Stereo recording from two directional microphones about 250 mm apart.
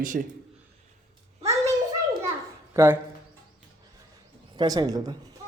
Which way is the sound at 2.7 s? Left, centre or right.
Centre.